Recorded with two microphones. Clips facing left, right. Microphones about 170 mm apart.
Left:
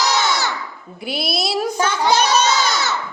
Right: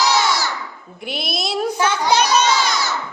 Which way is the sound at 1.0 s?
Centre (ahead or behind).